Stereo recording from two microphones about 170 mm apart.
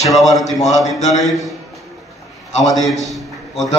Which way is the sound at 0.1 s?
Centre (ahead or behind).